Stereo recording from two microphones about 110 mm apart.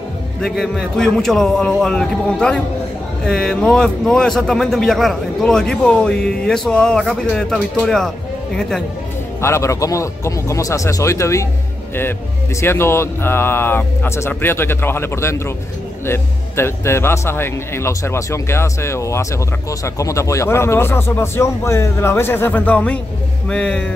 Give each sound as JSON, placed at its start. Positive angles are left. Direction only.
{"t": 0.4, "sound": "a man's voice", "side_deg": 5}
{"t": 9.4, "sound": "speech", "side_deg": 25}